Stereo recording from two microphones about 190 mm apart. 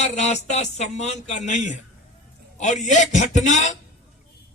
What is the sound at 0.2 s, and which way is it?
A man's voice, 35° left (ahead or behind).